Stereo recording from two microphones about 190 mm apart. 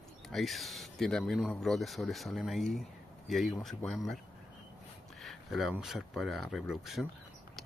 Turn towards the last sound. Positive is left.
turn(degrees=0)  # may be behind; listen again after turning